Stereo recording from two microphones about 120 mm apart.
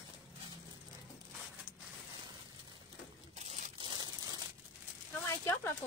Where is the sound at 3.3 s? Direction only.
70° right (ahead or behind).